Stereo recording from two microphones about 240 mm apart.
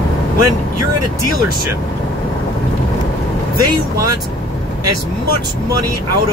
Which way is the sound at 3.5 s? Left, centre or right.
Right.